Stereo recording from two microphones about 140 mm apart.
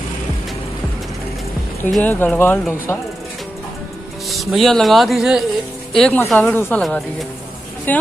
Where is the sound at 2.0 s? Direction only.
10° left (ahead or behind).